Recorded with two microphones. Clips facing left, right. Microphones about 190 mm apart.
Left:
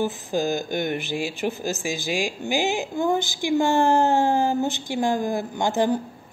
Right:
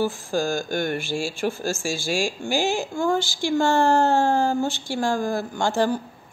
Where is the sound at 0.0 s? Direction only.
20° left (ahead or behind).